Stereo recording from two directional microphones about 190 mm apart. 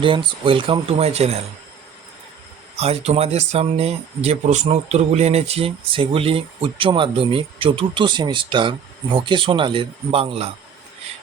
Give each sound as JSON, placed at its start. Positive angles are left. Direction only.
{"t": 0.0, "sound": "speech", "side_deg": -25}
{"t": 2.7, "sound": "speech", "side_deg": -30}